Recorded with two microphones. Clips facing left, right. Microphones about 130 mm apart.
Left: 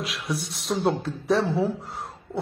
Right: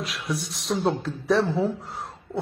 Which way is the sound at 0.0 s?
Centre (ahead or behind).